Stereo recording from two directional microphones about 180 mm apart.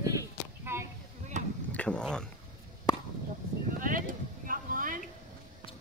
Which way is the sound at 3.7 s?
50° right (ahead or behind).